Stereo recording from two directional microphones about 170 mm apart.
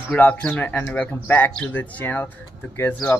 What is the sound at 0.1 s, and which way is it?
Speech, 10° left (ahead or behind).